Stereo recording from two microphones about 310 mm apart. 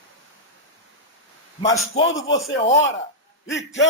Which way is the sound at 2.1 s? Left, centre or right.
Left.